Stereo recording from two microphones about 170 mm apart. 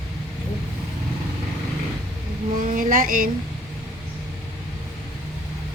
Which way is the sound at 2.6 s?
50° right (ahead or behind).